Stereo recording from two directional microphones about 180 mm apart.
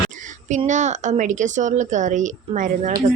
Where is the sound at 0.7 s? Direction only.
40° right (ahead or behind).